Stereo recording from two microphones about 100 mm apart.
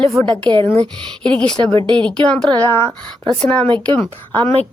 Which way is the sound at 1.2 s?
10° left (ahead or behind).